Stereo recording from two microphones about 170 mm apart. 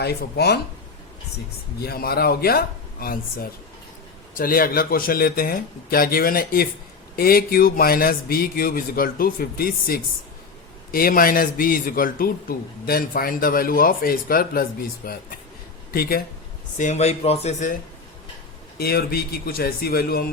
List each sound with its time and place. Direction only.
0.0 s speech: 70° left (ahead or behind)
1.8 s a man's voice: 65° left (ahead or behind)
16.7 s a man's voice: 45° left (ahead or behind)
18.8 s a man's voice: 65° left (ahead or behind)